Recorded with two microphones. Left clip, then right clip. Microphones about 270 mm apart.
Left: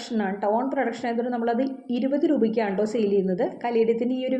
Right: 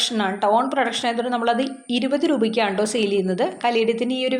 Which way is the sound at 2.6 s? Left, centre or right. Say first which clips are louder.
Right 4 dB; right.